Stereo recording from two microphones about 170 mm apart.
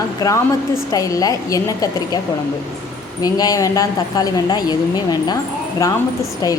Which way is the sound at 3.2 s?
20° left (ahead or behind).